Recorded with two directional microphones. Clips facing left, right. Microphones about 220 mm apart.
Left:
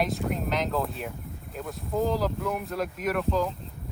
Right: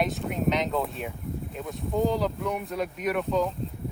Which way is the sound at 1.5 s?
Centre (ahead or behind).